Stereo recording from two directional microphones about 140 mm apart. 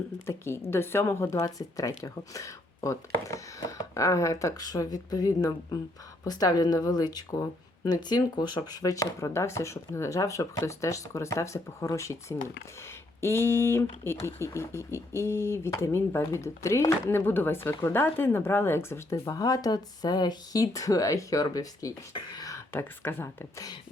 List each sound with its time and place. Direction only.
0.3 s speech: 20° left (ahead or behind)